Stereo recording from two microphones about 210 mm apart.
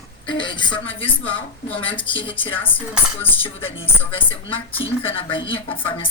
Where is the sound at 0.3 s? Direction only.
20° left (ahead or behind).